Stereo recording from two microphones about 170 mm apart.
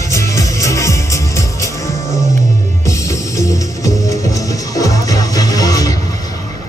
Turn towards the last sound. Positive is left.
turn(degrees=20)  # may be behind; listen again after turning